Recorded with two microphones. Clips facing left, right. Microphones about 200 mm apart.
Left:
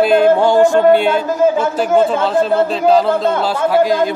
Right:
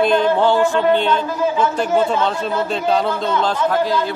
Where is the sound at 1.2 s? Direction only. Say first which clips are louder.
Left 5 dB; 45° left (ahead or behind).